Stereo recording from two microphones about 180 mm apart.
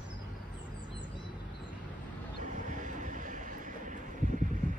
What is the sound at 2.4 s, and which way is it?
Vehicle, 45° right (ahead or behind).